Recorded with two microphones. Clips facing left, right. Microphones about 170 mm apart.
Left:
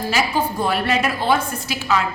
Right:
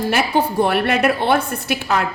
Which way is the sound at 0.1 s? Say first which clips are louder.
Right 1 dB; 60° right (ahead or behind).